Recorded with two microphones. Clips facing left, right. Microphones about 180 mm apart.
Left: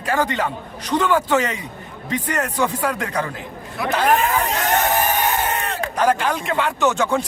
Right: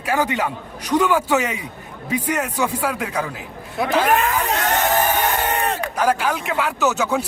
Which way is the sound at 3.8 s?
25° right (ahead or behind).